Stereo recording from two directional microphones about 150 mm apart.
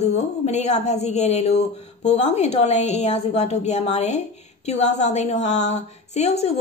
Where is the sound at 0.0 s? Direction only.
50° left (ahead or behind).